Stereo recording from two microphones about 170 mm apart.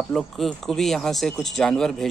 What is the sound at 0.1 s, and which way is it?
Speech, centre (ahead or behind).